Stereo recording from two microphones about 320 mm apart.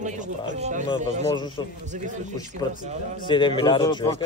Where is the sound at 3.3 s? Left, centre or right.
Centre.